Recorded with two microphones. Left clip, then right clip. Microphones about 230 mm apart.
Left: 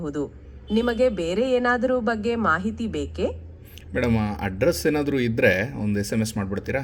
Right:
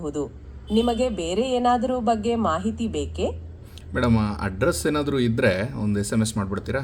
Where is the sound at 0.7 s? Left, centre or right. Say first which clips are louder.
Left 1 dB; left.